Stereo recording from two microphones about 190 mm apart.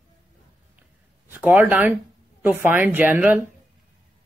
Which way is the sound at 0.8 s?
10° right (ahead or behind).